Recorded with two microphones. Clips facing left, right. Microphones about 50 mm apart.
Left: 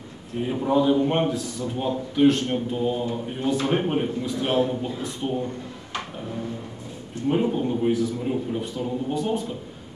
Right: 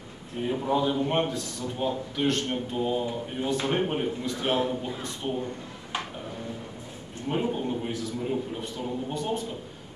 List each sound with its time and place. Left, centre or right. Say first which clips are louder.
0.4 s a man's voice: left 4 dB; centre
7.2 s a man's voice: left 5 dB; centre